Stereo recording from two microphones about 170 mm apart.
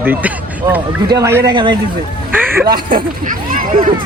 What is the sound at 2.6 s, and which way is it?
Speech, 60° right (ahead or behind).